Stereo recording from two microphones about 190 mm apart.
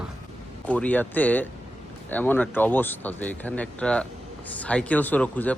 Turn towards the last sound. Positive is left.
turn(degrees=10)  # may be behind; listen again after turning